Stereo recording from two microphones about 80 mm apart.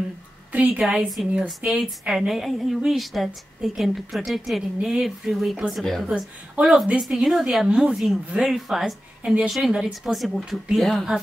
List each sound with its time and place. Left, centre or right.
0.5 s a woman's voice: centre
1.7 s a woman's voice: centre
6.5 s a woman's voice: centre